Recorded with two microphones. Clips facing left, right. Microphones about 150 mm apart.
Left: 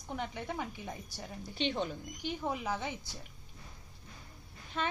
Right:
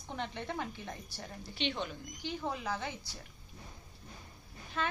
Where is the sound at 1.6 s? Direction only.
35° left (ahead or behind).